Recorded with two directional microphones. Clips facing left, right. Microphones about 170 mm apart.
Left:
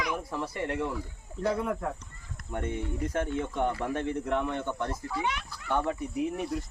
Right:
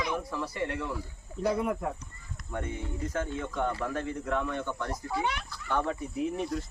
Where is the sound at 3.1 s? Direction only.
25° left (ahead or behind).